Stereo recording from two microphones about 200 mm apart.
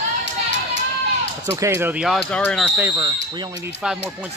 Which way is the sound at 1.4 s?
15° right (ahead or behind).